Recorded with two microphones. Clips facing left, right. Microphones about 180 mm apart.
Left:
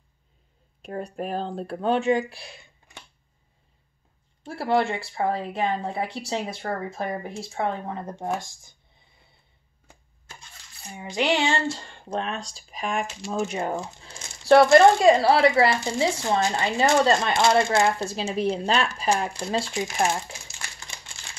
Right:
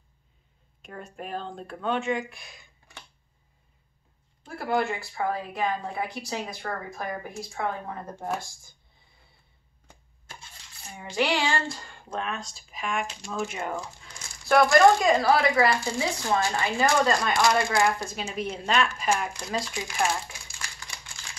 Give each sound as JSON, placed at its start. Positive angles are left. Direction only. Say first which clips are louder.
{"t": 0.8, "sound": "speech", "louder": "left 8 dB", "side_deg": 40}
{"t": 4.4, "sound": "speech", "louder": "left 4 dB", "side_deg": 30}
{"t": 11.0, "sound": "speech", "louder": "left 2 dB", "side_deg": 20}